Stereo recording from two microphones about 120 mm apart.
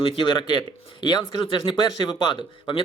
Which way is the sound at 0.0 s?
40° left (ahead or behind).